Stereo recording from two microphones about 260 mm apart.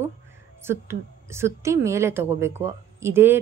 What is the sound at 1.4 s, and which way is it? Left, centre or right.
A woman's voice, centre.